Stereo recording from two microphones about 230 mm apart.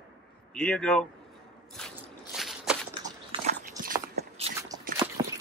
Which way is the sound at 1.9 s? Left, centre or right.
Centre.